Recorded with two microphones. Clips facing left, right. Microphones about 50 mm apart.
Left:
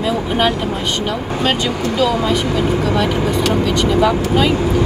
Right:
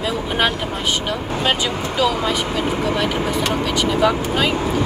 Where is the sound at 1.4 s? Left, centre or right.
Centre.